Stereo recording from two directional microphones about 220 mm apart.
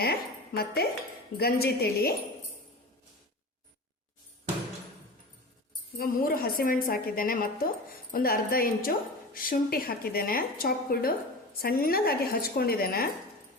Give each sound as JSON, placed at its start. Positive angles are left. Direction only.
{"t": 0.0, "sound": "a woman's voice", "side_deg": 45}
{"t": 6.0, "sound": "a woman's voice", "side_deg": 40}